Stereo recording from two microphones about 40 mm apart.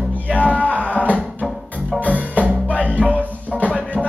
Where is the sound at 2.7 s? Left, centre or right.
Left.